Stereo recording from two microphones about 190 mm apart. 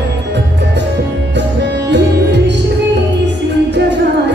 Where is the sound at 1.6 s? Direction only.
65° right (ahead or behind).